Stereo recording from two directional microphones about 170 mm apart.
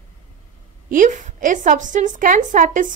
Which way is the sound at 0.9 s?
50° right (ahead or behind).